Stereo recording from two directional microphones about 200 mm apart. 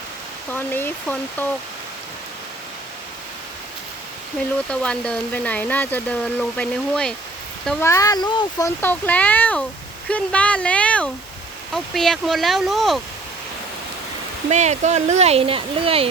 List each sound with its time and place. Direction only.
0.5 s speech: 10° left (ahead or behind)
4.7 s speech: 5° left (ahead or behind)
7.9 s speech: 15° left (ahead or behind); by 13.0 s centre (ahead or behind)
14.5 s speech: 35° right (ahead or behind)